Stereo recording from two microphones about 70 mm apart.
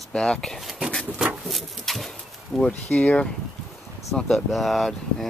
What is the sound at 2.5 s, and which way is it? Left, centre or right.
Speech, centre.